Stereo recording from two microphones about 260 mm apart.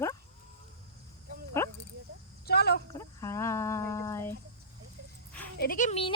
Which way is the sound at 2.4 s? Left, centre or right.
Left.